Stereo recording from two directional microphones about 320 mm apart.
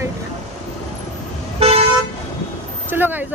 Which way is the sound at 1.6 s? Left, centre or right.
Centre.